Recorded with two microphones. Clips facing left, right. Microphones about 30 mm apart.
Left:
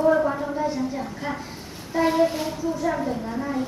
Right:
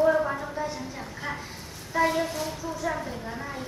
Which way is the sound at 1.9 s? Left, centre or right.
Centre.